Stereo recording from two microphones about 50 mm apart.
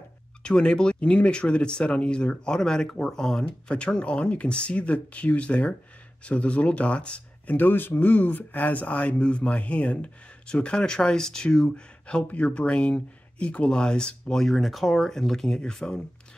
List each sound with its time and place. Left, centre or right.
0.4 s speech: centre
7.5 s speech: left; by 12.3 s centre
12.3 s speech: left
14.3 s speech: centre